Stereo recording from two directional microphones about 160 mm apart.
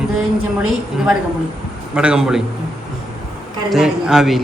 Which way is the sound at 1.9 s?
5° right (ahead or behind).